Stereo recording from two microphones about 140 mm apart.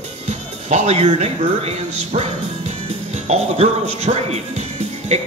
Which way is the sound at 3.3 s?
50° right (ahead or behind).